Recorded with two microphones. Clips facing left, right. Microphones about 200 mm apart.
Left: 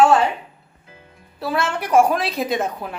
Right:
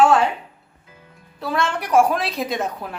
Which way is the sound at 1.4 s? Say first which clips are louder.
Left 1 dB; 5° left (ahead or behind).